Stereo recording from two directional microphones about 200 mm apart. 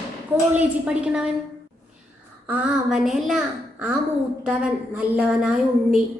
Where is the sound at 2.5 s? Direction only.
5° right (ahead or behind).